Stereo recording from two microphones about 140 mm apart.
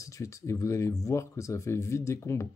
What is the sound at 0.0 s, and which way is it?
Speech, 20° left (ahead or behind).